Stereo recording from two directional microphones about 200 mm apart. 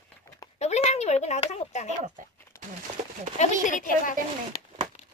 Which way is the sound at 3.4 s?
40° left (ahead or behind).